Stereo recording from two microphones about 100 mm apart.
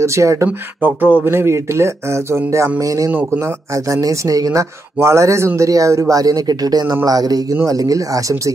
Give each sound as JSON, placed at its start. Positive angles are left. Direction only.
{"t": 0.0, "sound": "speech", "side_deg": -30}
{"t": 0.5, "sound": "speech", "side_deg": -20}
{"t": 3.1, "sound": "speech", "side_deg": -20}